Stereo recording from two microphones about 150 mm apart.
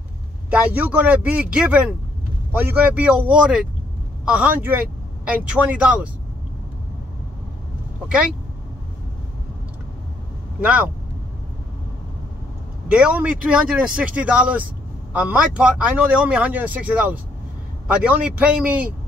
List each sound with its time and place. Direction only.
0.5 s speech: 10° right (ahead or behind)
10.6 s speech: 10° right (ahead or behind)
12.8 s speech: 10° right (ahead or behind)